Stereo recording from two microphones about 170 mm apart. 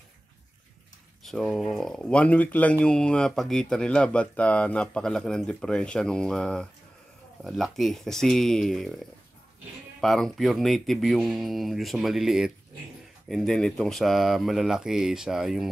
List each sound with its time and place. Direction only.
1.2 s speech: centre (ahead or behind)
9.9 s speech: centre (ahead or behind)